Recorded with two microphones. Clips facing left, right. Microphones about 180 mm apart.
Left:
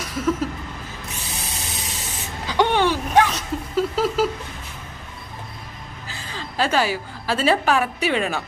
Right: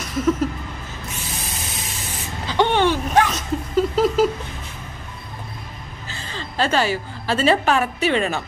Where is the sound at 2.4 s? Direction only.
10° left (ahead or behind).